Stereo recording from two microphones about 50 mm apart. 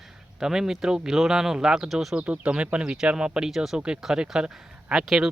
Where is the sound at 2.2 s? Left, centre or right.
Right; by 3.8 s centre.